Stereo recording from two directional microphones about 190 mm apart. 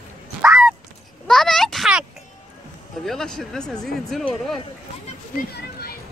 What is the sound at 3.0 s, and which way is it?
Speech, centre (ahead or behind).